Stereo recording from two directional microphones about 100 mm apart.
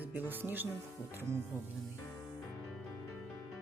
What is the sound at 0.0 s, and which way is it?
Speech, 20° right (ahead or behind).